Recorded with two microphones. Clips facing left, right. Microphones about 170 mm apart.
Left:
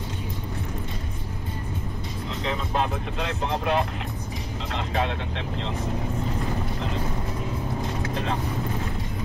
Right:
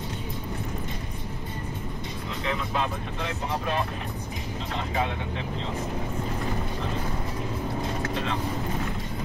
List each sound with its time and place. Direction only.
3.2 s speech: 85° left